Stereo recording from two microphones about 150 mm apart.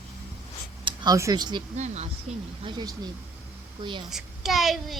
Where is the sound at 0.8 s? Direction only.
25° right (ahead or behind).